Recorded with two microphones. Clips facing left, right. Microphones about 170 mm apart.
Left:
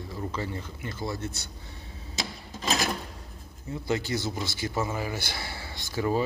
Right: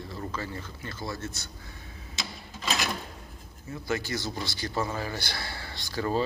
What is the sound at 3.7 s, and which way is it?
Speech, 20° left (ahead or behind).